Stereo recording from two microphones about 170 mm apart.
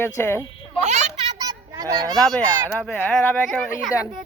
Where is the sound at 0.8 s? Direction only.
45° right (ahead or behind).